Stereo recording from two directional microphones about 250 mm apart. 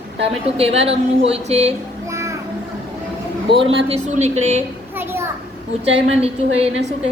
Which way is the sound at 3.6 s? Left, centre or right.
Right.